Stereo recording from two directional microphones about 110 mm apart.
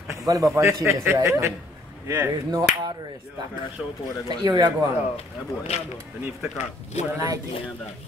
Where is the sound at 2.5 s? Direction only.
40° right (ahead or behind).